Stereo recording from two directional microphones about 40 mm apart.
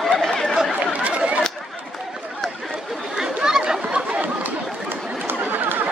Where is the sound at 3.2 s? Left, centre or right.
Centre.